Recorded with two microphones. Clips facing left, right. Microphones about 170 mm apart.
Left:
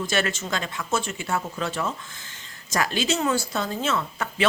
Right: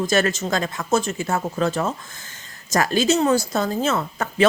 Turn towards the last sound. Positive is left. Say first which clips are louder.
# right 6 dB
turn(degrees=-40)  # may be behind; listen again after turning